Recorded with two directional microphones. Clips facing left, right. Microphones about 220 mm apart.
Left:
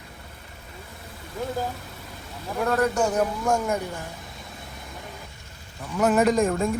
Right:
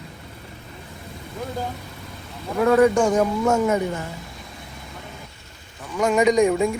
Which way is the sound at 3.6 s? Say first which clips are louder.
Right 6 dB; 80° right.